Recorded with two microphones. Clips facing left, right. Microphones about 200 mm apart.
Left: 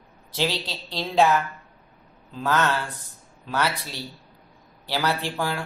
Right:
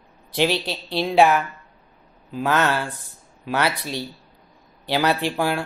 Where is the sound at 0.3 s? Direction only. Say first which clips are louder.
Right 5 dB; 15° right (ahead or behind).